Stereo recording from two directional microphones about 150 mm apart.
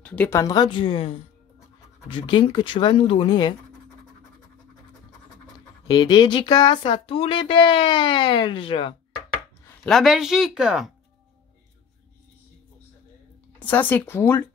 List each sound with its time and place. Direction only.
0.0 s speech: 10° left (ahead or behind)
0.4 s speech: 25° left (ahead or behind)
5.9 s speech: 25° left (ahead or behind)
9.8 s speech: centre (ahead or behind)
13.6 s speech: 10° left (ahead or behind)